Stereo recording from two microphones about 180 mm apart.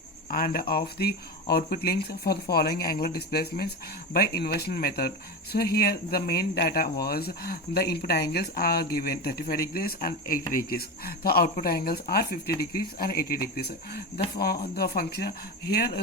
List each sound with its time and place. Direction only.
0.3 s speech: 50° left (ahead or behind)